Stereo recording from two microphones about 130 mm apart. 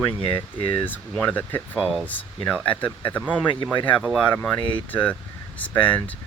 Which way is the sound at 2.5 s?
10° left (ahead or behind).